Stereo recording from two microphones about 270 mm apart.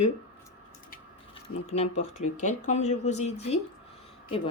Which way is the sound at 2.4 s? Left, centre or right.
Left.